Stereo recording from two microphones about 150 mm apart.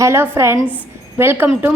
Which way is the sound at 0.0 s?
20° right (ahead or behind).